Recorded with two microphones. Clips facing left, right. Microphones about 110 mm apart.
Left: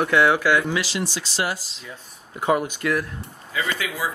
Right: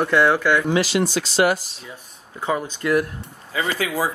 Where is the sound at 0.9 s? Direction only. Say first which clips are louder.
Right 7 dB; 60° right (ahead or behind).